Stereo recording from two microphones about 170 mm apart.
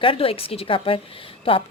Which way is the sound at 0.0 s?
35° left (ahead or behind).